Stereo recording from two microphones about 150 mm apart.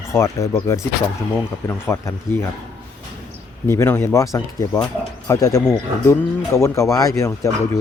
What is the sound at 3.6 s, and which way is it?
Speech, 15° left (ahead or behind).